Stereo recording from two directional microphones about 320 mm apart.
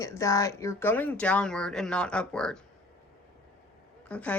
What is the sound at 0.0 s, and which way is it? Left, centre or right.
Speech, centre.